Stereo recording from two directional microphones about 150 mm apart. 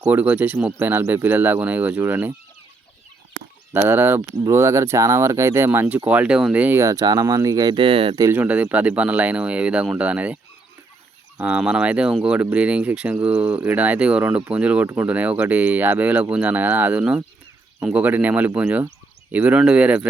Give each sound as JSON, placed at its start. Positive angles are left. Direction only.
{"t": 0.0, "sound": "speech", "side_deg": -10}
{"t": 3.8, "sound": "speech", "side_deg": -15}
{"t": 8.2, "sound": "speech", "side_deg": -10}
{"t": 11.3, "sound": "speech", "side_deg": -5}